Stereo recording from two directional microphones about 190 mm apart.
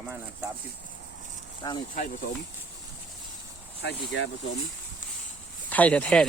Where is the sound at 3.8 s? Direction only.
70° left (ahead or behind).